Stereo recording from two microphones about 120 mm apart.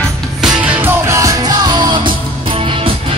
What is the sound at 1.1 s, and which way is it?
Music, 30° right (ahead or behind).